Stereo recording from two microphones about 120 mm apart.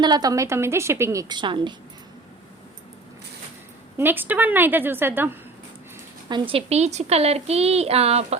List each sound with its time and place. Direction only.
0.0 s a woman's voice: 35° right (ahead or behind)
1.4 s a woman's voice: 40° right (ahead or behind)
3.9 s a woman's voice: 15° right (ahead or behind)
6.2 s a woman's voice: 40° right (ahead or behind); by 8.4 s 60° right (ahead or behind)